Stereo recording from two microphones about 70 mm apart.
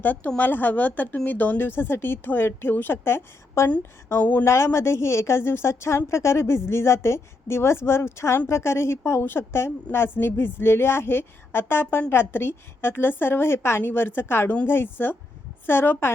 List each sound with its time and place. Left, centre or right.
0.0 s speech: left
4.2 s speech: left
4.4 s a woman's voice: left